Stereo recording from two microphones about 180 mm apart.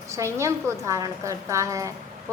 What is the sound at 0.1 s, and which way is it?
A woman's voice, 15° right (ahead or behind).